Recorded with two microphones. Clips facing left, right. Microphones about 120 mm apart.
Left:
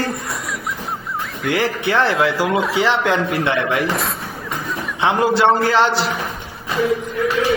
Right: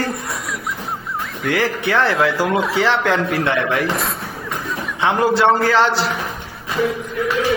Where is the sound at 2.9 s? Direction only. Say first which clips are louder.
Even; 15° left (ahead or behind).